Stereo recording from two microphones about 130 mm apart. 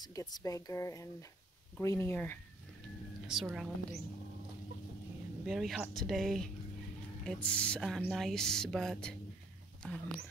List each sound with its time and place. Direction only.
0.0 s speech: 30° left (ahead or behind)
3.3 s speech: 5° right (ahead or behind)
5.5 s speech: 5° right (ahead or behind)